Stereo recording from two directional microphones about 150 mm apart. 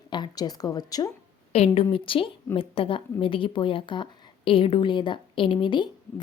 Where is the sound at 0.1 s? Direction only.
30° left (ahead or behind).